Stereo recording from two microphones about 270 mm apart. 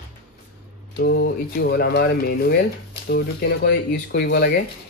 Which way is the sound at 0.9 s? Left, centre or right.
Left.